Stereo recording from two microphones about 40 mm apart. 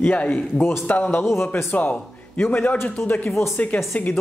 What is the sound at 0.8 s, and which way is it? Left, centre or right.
Speech, left.